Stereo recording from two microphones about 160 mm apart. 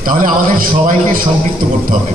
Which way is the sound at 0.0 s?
60° right (ahead or behind).